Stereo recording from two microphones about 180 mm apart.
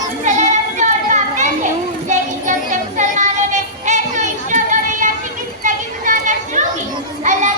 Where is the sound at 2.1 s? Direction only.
45° right (ahead or behind).